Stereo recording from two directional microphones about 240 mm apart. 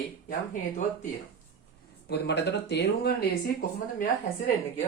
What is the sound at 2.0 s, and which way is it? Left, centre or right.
Speech, left.